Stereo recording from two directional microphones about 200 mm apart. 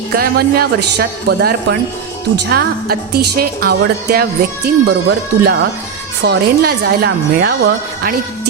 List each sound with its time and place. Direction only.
0.1 s a woman's voice: 50° right (ahead or behind)